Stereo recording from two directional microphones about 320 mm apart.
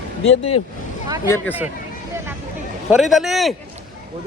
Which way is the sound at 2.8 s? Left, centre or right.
Centre.